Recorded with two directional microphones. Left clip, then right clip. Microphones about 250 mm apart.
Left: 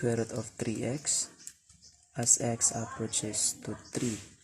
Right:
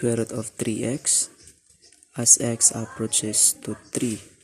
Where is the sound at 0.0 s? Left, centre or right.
Centre.